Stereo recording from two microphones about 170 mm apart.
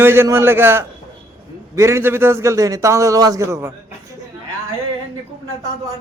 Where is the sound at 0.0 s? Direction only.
15° right (ahead or behind).